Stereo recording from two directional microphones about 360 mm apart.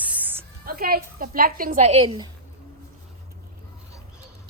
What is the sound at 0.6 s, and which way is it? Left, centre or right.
A woman's voice, right.